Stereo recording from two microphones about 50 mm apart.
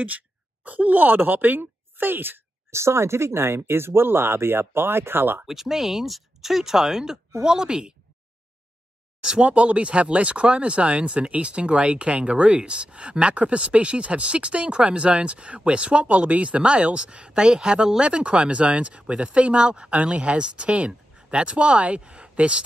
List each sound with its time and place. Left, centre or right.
0.7 s speech: right
2.7 s speech: right
5.5 s speech: centre
9.2 s speech: centre